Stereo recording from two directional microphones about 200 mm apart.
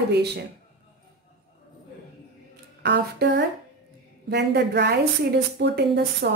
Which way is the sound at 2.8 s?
60° right (ahead or behind).